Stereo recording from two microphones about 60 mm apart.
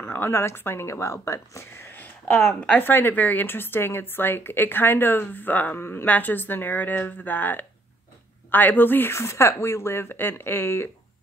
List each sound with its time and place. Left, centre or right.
0.0 s speech: left
1.8 s a sound: left
2.3 s a woman's voice: left
5.8 s a woman's voice: left
6.0 s a woman's voice: left
9.1 s a woman's voice: left